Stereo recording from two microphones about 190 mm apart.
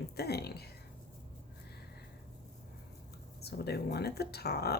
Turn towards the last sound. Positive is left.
turn(degrees=55)  # may be behind; listen again after turning